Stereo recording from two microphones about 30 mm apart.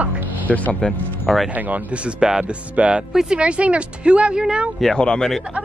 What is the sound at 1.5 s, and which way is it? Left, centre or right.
Speech, right.